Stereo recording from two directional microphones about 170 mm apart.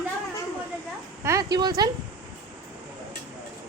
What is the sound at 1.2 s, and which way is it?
Speech, 20° right (ahead or behind).